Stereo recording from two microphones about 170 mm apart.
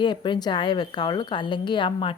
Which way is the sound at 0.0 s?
25° left (ahead or behind).